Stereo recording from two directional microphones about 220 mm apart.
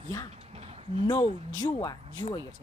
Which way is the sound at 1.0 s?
20° left (ahead or behind).